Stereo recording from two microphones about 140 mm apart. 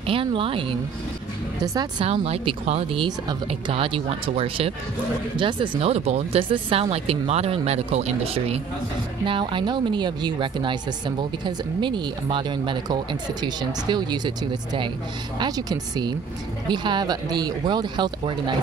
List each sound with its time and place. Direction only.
0.0 s speech: 40° right (ahead or behind)
1.6 s a woman's voice: 30° right (ahead or behind)
2.0 s speech: 45° right (ahead or behind)
3.0 s speech: 30° right (ahead or behind)
3.4 s speech: 40° right (ahead or behind)
9.2 s speech: 35° right (ahead or behind)